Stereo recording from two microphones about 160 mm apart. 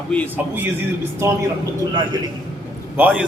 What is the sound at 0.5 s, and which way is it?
Speech, 15° right (ahead or behind).